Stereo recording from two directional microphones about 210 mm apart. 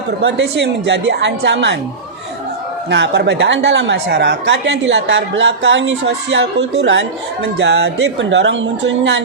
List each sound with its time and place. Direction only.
0.2 s a woman's voice: 55° right (ahead or behind)
2.9 s a woman's voice: 55° right (ahead or behind)